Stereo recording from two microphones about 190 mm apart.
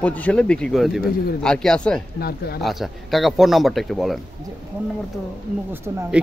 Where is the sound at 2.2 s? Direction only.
55° left (ahead or behind).